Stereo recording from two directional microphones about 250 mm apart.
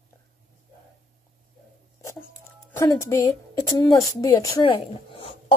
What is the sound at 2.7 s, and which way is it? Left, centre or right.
A woman's voice, centre.